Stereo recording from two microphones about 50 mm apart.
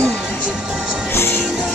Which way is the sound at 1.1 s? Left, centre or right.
Left.